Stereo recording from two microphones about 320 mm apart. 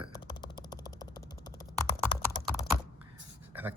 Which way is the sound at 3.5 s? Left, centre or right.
Centre.